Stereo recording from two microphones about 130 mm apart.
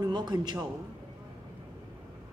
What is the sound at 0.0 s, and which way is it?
Speech, 30° right (ahead or behind).